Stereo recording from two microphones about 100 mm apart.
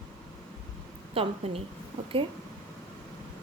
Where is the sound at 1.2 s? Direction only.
85° right.